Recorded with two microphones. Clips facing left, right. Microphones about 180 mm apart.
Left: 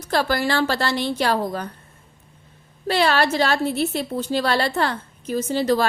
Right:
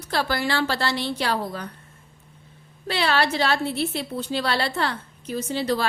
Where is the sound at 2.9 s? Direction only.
45° left (ahead or behind).